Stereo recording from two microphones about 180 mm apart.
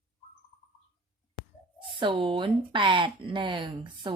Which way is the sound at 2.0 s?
30° right (ahead or behind).